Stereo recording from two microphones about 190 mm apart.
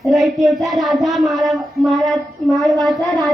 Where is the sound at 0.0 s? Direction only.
Centre (ahead or behind).